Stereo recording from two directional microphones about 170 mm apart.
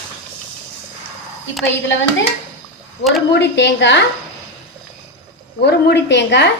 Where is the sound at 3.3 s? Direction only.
85° left.